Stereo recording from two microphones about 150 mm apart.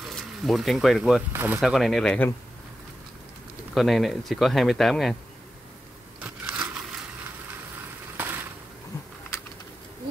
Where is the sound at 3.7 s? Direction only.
Centre (ahead or behind).